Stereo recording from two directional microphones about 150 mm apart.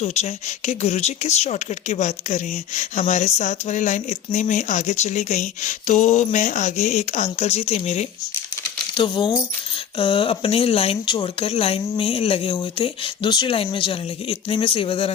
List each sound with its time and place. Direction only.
0.0 s speech: 45° left (ahead or behind)
9.0 s speech: 30° left (ahead or behind)